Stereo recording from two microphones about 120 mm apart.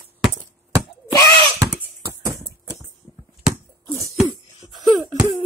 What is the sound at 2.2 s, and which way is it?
Clip-clop, 25° right (ahead or behind).